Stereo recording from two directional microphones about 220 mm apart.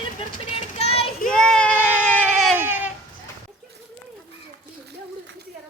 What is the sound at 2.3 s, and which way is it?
Baby cry, 5° right (ahead or behind).